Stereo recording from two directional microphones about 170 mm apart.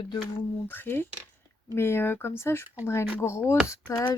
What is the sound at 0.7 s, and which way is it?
Speech, 15° left (ahead or behind).